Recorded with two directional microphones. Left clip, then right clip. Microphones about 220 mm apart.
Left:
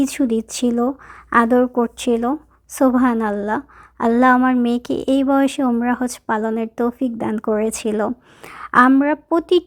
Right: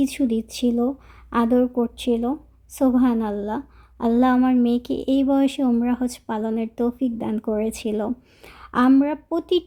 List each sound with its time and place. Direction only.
0.2 s speech: 10° left (ahead or behind)
4.7 s speech: 35° left (ahead or behind)
5.2 s speech: 10° left (ahead or behind)